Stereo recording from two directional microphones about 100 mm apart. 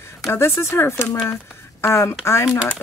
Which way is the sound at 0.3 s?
25° left (ahead or behind).